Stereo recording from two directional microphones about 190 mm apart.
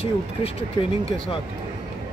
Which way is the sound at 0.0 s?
30° left (ahead or behind).